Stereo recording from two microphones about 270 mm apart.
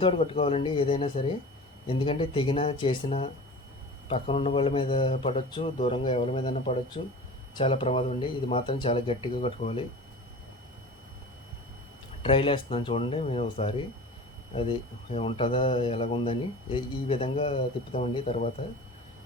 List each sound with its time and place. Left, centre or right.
0.0 s speech: left
12.2 s speech: centre